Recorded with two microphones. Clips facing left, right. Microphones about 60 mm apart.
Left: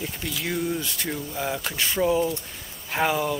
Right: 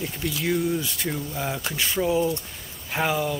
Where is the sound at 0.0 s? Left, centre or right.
Centre.